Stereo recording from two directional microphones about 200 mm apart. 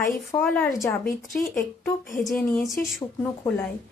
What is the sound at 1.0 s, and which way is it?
Speech, 40° left (ahead or behind).